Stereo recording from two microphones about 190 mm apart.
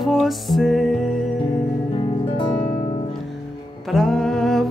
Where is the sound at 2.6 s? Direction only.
40° left (ahead or behind).